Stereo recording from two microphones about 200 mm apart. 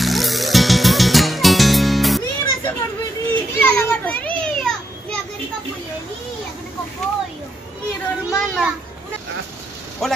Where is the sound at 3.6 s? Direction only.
10° left (ahead or behind).